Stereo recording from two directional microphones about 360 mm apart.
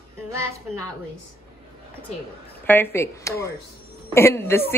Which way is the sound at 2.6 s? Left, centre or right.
Centre.